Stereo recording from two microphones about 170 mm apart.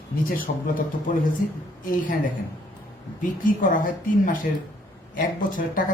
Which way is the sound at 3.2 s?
50° left (ahead or behind).